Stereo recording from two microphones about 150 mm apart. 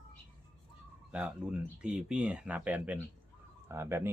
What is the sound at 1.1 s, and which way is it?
Speech, 5° right (ahead or behind).